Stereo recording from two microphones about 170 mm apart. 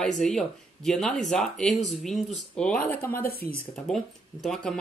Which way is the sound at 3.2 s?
60° left (ahead or behind).